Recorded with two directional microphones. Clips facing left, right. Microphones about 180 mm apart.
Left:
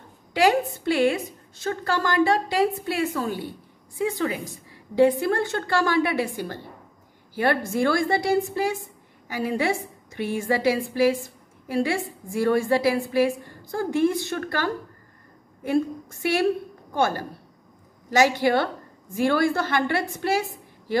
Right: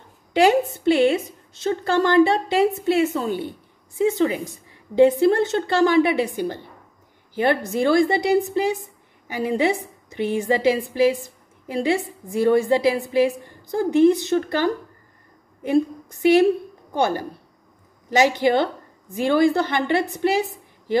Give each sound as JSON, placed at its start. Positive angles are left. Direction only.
{"t": 0.3, "sound": "a woman's voice", "side_deg": -25}